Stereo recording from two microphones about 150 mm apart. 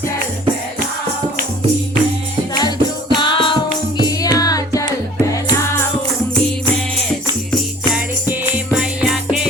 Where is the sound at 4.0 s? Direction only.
25° left (ahead or behind).